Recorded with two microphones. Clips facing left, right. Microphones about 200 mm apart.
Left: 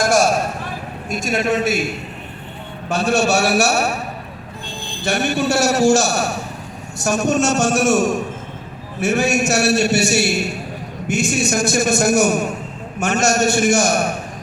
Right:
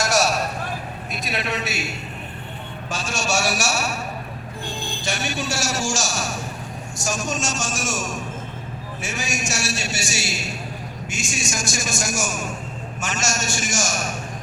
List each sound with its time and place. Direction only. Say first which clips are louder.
0.0 s a sound: left 5 dB; 50° left (ahead or behind)
1.1 s a man's voice: left 9 dB; 45° left (ahead or behind)
5.0 s a man's voice: left 9 dB; 60° left (ahead or behind)